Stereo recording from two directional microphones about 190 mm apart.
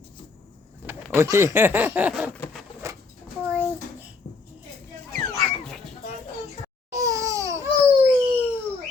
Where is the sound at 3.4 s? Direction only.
10° right (ahead or behind).